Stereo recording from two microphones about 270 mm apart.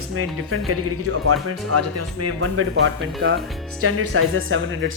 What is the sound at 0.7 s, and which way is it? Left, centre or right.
Speech, right.